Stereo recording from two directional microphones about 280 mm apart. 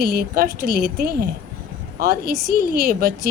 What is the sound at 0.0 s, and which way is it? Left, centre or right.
A woman's voice, right.